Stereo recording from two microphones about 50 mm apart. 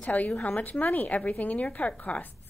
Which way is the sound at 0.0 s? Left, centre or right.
Left.